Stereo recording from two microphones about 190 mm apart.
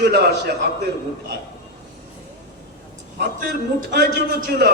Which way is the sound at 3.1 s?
55° right (ahead or behind).